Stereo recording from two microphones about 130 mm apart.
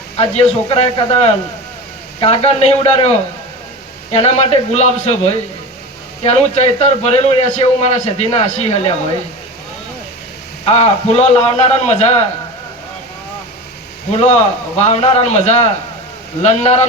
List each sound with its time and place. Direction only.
0.2 s a man's voice: 45° left (ahead or behind)
4.1 s a man's voice: 45° left (ahead or behind)
10.8 s a man's voice: 50° left (ahead or behind)
14.1 s a man's voice: 50° left (ahead or behind)